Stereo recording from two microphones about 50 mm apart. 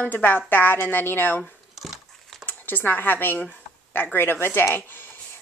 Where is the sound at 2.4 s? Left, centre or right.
Left.